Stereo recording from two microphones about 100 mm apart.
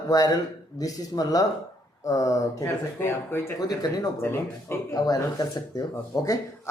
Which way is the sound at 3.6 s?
40° left (ahead or behind).